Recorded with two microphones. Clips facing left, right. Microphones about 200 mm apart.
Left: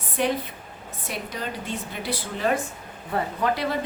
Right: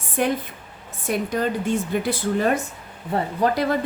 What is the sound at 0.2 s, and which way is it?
A woman's voice, 50° right (ahead or behind).